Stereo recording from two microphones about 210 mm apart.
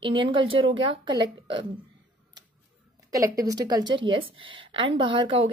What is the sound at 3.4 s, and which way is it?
Speech, 20° right (ahead or behind).